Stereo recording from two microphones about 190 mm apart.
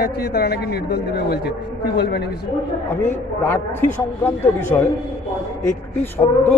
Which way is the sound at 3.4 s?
10° left (ahead or behind).